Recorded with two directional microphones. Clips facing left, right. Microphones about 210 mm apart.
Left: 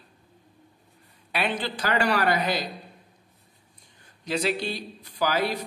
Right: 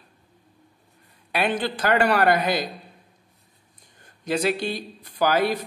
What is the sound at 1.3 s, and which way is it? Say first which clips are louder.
Speech: right 4 dB; 50° right (ahead or behind).